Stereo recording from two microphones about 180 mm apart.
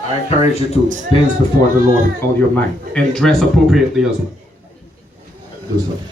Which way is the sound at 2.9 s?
5° left (ahead or behind).